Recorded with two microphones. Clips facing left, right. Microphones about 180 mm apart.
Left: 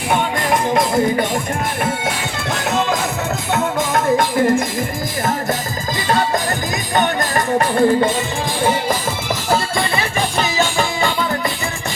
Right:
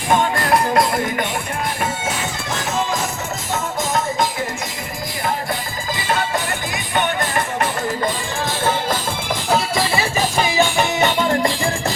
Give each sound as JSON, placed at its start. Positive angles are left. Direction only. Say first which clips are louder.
{"t": 0.7, "sound": "music", "louder": "left 3 dB", "side_deg": 25}
{"t": 3.5, "sound": "music", "louder": "left 3 dB", "side_deg": 55}
{"t": 6.1, "sound": "music", "louder": "left 4 dB", "side_deg": 40}
{"t": 8.6, "sound": "music", "louder": "left 3 dB", "side_deg": 10}
{"t": 9.5, "sound": "music", "louder": "even", "side_deg": 0}